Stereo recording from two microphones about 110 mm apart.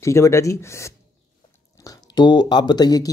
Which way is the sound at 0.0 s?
25° left (ahead or behind).